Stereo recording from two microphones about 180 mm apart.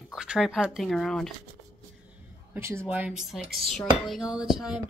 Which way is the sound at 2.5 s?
15° right (ahead or behind).